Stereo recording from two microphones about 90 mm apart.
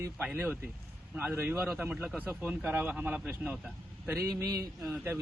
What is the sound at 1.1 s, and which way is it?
Speech, 20° right (ahead or behind).